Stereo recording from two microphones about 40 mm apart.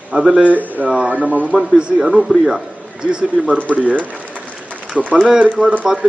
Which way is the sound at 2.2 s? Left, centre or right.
Centre.